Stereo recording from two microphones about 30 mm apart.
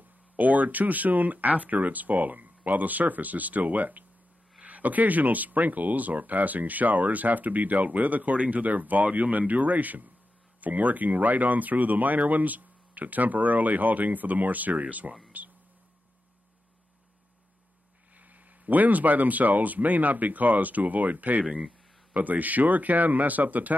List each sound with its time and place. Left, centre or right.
0.4 s speech: right
15.3 s a sound: right
18.2 s speech: right